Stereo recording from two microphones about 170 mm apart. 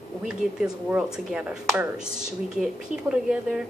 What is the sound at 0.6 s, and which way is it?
A woman's voice, 5° right (ahead or behind).